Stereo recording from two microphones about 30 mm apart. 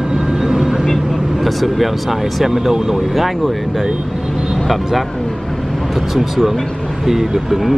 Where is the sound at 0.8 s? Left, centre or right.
Centre.